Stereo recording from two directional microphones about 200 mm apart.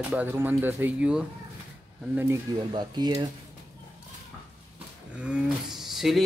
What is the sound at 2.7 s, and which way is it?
Speech, 20° right (ahead or behind).